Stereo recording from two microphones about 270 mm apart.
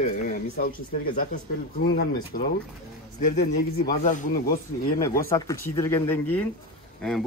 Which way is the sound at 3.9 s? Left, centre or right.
Left.